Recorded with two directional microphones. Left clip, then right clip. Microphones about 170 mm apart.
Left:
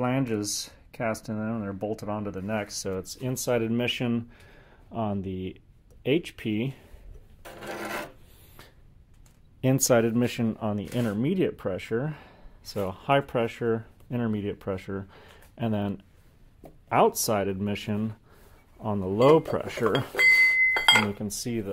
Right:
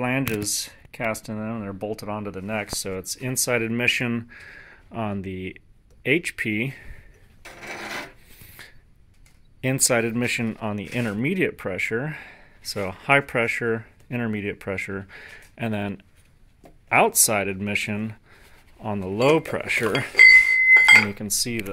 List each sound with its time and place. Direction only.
0.0 s speech: 10° right (ahead or behind)
9.6 s speech: 20° left (ahead or behind)
10.5 s speech: 5° right (ahead or behind)
20.7 s chink: 20° right (ahead or behind)
21.1 s speech: 10° right (ahead or behind)